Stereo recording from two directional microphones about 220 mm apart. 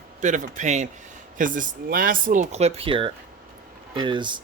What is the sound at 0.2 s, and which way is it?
Speech, 35° right (ahead or behind).